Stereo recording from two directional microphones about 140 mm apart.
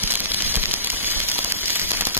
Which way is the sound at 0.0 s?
15° right (ahead or behind).